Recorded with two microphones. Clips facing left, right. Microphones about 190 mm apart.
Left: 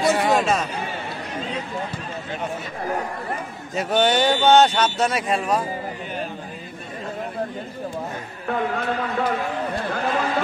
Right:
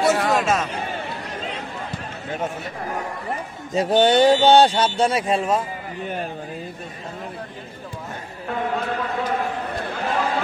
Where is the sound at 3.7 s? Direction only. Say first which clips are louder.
Right 4 dB; 35° right (ahead or behind).